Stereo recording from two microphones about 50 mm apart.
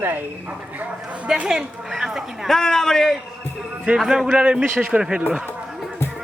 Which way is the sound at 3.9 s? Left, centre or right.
Centre.